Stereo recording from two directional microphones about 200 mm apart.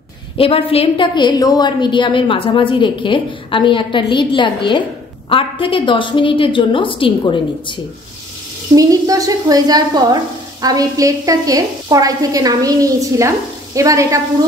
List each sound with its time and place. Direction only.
0.4 s a woman's voice: 30° left (ahead or behind)
8.7 s sizzle: 15° right (ahead or behind)